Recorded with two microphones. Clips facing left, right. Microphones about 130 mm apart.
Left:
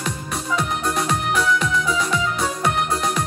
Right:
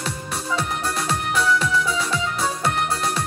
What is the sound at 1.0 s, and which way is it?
Music, 30° right (ahead or behind).